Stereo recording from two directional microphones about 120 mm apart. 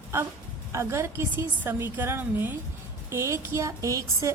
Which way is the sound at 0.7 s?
25° right (ahead or behind).